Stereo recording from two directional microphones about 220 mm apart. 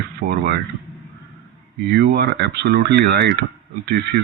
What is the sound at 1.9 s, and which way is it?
Speech, 45° right (ahead or behind).